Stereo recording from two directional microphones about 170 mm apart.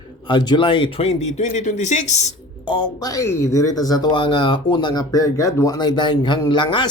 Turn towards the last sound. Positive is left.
turn(degrees=25)  # may be behind; listen again after turning